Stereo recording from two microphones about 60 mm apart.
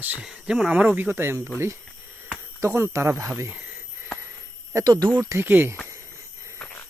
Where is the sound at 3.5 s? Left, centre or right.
Right.